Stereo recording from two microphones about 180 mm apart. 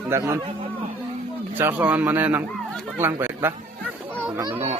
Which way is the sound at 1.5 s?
10° right (ahead or behind).